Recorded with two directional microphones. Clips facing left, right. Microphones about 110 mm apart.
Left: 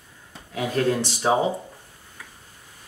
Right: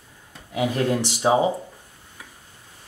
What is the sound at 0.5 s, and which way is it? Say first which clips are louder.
Speech: right 1 dB; 15° right (ahead or behind).